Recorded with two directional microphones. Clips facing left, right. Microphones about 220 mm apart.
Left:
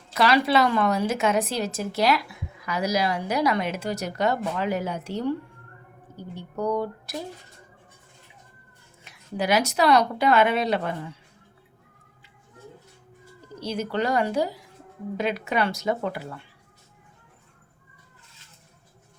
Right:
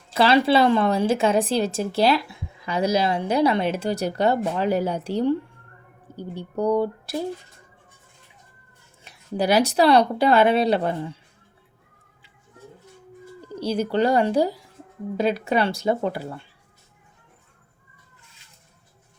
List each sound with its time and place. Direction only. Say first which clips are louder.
0.1 s a woman's voice: right 3 dB; 30° right (ahead or behind)
9.0 s speech: right 3 dB; 35° right (ahead or behind)
13.6 s speech: right 5 dB; 30° right (ahead or behind)